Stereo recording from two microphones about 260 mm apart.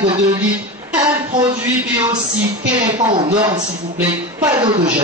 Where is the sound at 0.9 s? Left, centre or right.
Centre.